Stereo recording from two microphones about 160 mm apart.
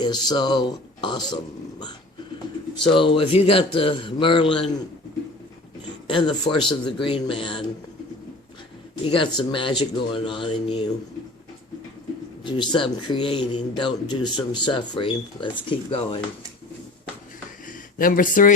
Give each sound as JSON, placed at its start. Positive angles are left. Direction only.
{"t": 0.0, "sound": "speech", "side_deg": 25}
{"t": 2.9, "sound": "speech", "side_deg": 30}
{"t": 6.1, "sound": "speech", "side_deg": 30}
{"t": 9.0, "sound": "speech", "side_deg": 30}
{"t": 12.5, "sound": "speech", "side_deg": 30}
{"t": 17.7, "sound": "speech", "side_deg": 60}